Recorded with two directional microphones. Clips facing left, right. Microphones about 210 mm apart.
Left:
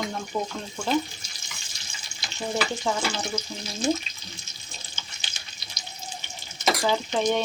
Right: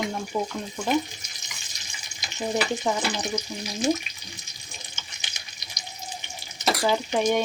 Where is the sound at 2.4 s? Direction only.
15° right (ahead or behind).